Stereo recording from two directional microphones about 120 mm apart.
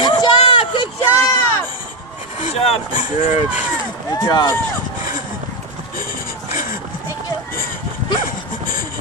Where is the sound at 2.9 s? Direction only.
90° left.